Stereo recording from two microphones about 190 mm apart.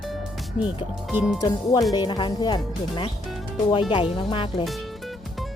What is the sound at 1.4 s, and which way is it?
Speech, 20° left (ahead or behind).